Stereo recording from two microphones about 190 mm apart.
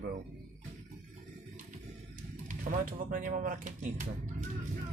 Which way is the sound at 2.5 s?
40° right (ahead or behind).